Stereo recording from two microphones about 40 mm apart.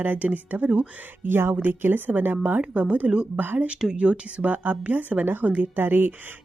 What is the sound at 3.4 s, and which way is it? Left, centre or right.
Speech, right.